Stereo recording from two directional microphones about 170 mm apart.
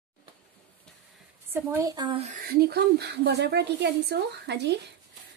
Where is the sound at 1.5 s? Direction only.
15° right (ahead or behind).